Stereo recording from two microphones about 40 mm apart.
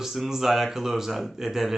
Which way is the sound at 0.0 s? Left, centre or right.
Centre.